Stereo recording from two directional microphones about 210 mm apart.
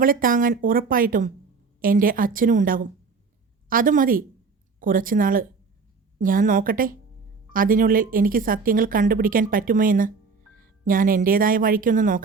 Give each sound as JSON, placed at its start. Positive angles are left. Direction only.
{"t": 0.0, "sound": "speech", "side_deg": -40}